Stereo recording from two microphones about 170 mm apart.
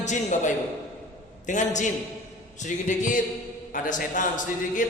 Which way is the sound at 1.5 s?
45° left (ahead or behind).